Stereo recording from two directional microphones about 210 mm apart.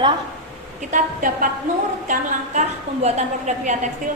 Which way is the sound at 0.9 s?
40° right (ahead or behind).